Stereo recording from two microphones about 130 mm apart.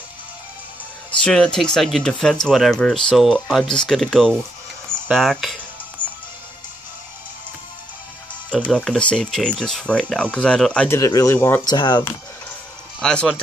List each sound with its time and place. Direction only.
1.2 s speech: 5° left (ahead or behind)
8.5 s speech: 5° left (ahead or behind)
11.0 s speech: 25° left (ahead or behind)
11.6 s speech: 35° left (ahead or behind)
13.0 s speech: 5° left (ahead or behind)